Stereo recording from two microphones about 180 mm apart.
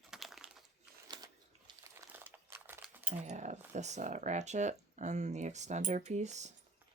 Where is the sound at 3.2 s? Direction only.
40° right (ahead or behind).